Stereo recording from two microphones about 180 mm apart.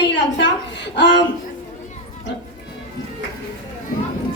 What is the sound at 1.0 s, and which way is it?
Speech, 80° left.